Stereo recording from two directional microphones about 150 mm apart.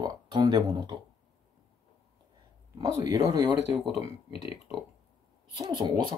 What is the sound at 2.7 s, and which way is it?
Speech, 25° right (ahead or behind).